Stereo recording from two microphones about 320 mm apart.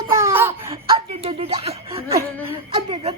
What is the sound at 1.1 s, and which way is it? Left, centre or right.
Speech, centre.